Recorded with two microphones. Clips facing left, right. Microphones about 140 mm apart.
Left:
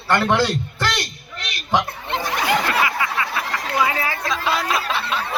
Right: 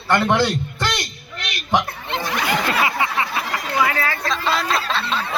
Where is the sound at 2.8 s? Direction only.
25° right (ahead or behind).